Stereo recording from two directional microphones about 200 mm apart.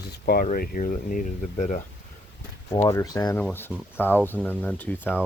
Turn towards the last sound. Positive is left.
turn(degrees=10)  # may be behind; listen again after turning